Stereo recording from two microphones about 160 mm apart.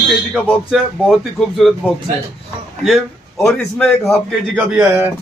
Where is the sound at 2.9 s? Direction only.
Centre (ahead or behind).